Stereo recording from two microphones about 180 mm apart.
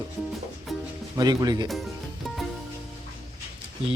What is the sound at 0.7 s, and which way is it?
Music, centre (ahead or behind).